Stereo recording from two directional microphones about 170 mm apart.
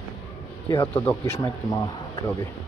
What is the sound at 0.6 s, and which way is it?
Speech, 20° left (ahead or behind).